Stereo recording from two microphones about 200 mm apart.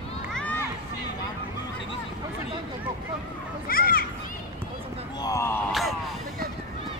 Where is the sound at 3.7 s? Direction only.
45° left (ahead or behind).